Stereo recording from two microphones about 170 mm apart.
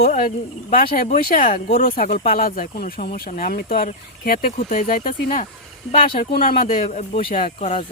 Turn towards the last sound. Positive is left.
turn(degrees=45)  # may be behind; listen again after turning